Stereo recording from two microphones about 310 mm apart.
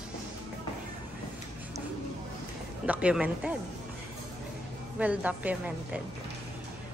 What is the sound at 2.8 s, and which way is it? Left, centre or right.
Speech, centre.